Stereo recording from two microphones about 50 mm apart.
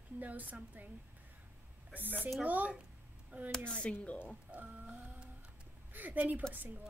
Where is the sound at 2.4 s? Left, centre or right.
Right.